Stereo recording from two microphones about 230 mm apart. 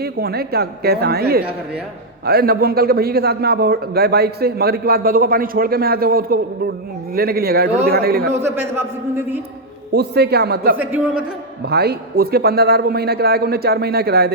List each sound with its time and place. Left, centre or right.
0.0 s a man's voice: right
8.4 s a man's voice: centre
9.9 s a man's voice: right
10.8 s a man's voice: centre
11.6 s a man's voice: right